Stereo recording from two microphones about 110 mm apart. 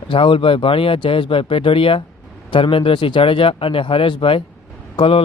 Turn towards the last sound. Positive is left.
turn(degrees=55)  # may be behind; listen again after turning